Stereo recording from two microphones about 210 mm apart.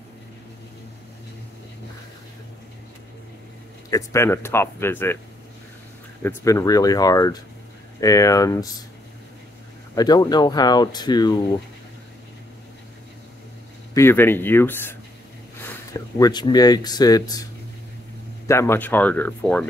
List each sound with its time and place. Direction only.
3.9 s speech: 15° left (ahead or behind)
6.2 s speech: 15° left (ahead or behind)
9.9 s speech: 20° left (ahead or behind)
13.9 s speech: 10° left (ahead or behind)
18.5 s speech: 10° left (ahead or behind)